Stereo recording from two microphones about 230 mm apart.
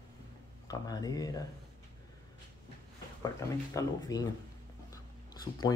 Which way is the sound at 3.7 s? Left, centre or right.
Centre.